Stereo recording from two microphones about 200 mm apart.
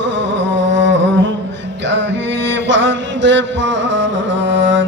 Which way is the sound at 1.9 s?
65° right (ahead or behind).